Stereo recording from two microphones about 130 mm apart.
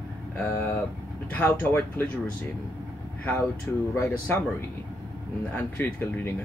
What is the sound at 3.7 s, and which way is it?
Speech, 10° left (ahead or behind).